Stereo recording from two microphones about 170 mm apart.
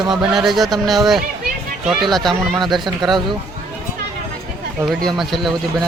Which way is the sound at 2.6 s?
25° right (ahead or behind).